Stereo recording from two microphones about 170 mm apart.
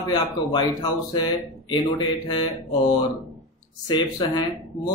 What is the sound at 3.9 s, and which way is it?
Speech, 25° left (ahead or behind).